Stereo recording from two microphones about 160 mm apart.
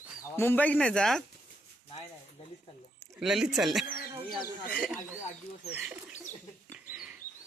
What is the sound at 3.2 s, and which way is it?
Speech, centre (ahead or behind).